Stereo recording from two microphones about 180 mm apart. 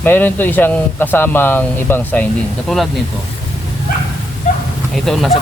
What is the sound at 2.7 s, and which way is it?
Speech, centre (ahead or behind).